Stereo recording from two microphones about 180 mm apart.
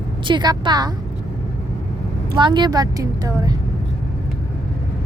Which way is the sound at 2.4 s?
25° right (ahead or behind).